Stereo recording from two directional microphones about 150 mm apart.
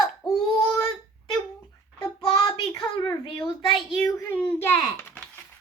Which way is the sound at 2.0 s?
25° left (ahead or behind).